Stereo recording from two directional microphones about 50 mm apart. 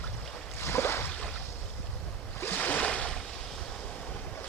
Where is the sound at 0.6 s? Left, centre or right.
Left.